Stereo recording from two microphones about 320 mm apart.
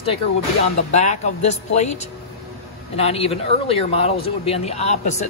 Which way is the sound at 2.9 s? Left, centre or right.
Centre.